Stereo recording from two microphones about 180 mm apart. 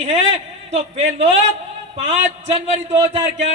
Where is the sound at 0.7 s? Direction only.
35° right (ahead or behind).